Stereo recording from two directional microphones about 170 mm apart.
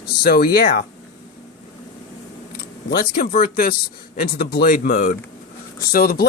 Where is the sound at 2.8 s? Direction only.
65° left (ahead or behind).